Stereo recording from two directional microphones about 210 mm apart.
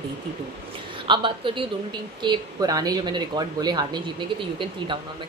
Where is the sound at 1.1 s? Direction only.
25° right (ahead or behind).